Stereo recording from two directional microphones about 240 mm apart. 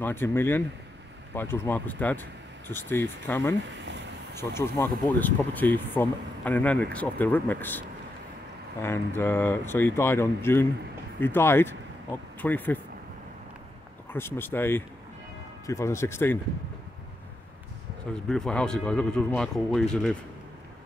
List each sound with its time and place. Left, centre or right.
0.0 s speech: centre
3.7 s a sound: right
4.4 s speech: centre
8.8 s speech: centre
14.1 s speech: centre
18.1 s speech: centre